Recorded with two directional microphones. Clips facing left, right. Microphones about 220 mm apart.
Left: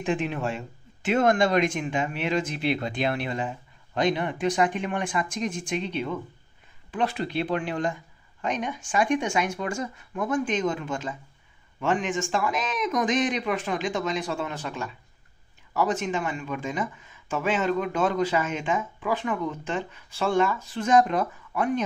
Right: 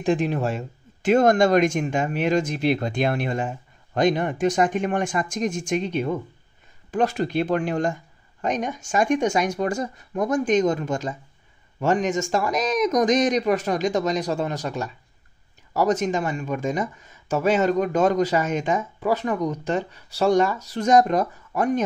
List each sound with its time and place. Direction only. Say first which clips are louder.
0.0 s speech: right 5 dB; 40° right (ahead or behind)